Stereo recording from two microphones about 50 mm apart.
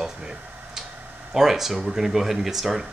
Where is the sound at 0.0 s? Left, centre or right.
Centre.